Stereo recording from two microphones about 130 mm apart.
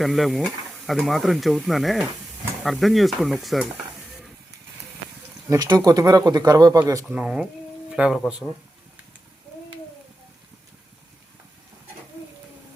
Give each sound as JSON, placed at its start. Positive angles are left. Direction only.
{"t": 0.0, "sound": "speech", "side_deg": 0}
{"t": 5.5, "sound": "speech", "side_deg": -25}
{"t": 7.1, "sound": "speech", "side_deg": -10}